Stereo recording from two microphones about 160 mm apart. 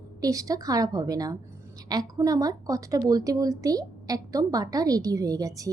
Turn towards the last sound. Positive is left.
turn(degrees=-20)  # may be behind; listen again after turning